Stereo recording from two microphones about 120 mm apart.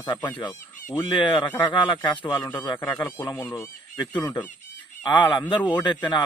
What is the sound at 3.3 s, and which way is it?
Speech, 30° left (ahead or behind).